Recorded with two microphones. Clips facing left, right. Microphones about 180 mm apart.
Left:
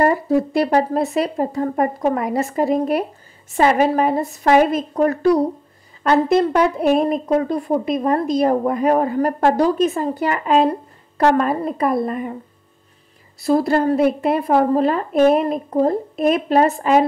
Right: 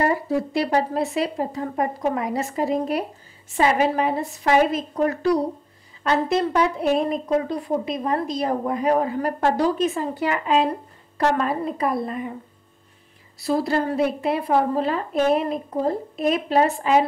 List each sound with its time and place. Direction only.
0.0 s a woman's voice: 50° left (ahead or behind)
13.4 s a woman's voice: 50° left (ahead or behind)